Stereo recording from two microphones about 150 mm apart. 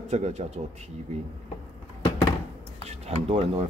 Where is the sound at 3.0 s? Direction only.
45° right (ahead or behind).